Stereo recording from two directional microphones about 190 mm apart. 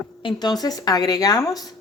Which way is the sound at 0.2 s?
25° left (ahead or behind).